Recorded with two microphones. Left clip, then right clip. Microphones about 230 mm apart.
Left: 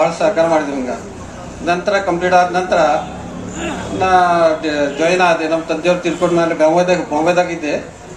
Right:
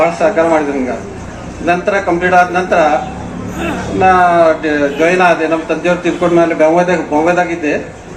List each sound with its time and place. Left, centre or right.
0.0 s a sound: left
1.6 s a man's voice: left
4.0 s a man's voice: left